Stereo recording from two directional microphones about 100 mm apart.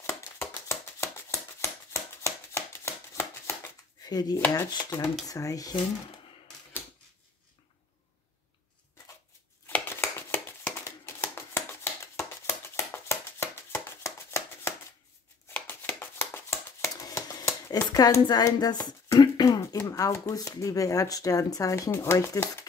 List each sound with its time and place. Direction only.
0.0 s a sound: 25° left (ahead or behind)
1.6 s shuffling cards: 30° left (ahead or behind)
4.0 s speech: 40° left (ahead or behind)
9.7 s shuffling cards: 20° left (ahead or behind); by 17.5 s 40° left (ahead or behind)
17.5 s speech: 30° left (ahead or behind)